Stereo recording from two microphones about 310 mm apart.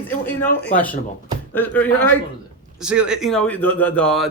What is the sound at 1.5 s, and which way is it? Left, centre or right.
Speech, centre.